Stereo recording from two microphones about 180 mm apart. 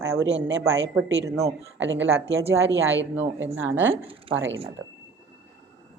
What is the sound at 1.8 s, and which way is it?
Speech, 90° right.